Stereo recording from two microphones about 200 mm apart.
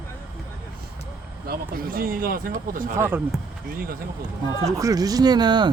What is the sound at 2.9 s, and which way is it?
Speech, 10° right (ahead or behind).